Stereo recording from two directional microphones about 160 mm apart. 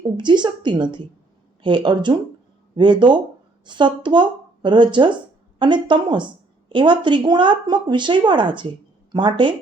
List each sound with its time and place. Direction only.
0.2 s speech: 30° right (ahead or behind)